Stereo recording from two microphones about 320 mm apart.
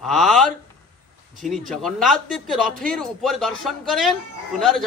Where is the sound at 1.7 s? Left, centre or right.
Centre.